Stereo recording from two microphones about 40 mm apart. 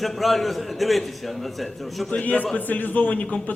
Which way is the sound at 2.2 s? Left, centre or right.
Left.